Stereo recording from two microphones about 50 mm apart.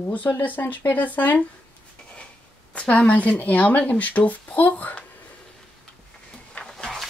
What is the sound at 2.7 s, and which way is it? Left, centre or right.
A woman's voice, left.